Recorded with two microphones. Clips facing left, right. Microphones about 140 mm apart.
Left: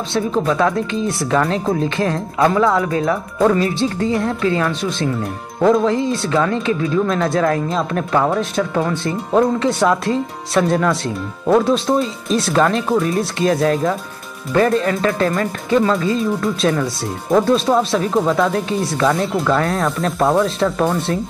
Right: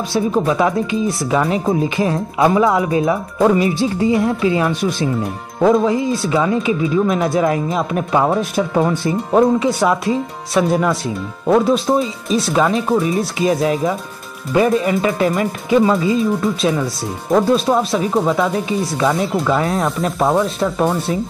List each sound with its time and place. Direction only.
0.3 s speech: 10° right (ahead or behind)
5.2 s speech: centre (ahead or behind)
9.1 s speech: 5° right (ahead or behind)